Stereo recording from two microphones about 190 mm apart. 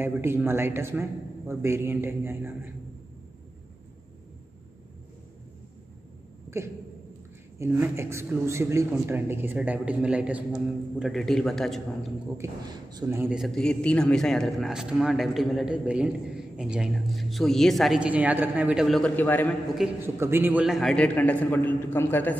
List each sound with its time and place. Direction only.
0.0 s a man's voice: 10° right (ahead or behind)
7.5 s a man's voice: 15° right (ahead or behind)
12.4 s a man's voice: 20° right (ahead or behind); by 19.5 s 10° left (ahead or behind)
20.0 s a man's voice: 10° right (ahead or behind); by 22.4 s 10° left (ahead or behind)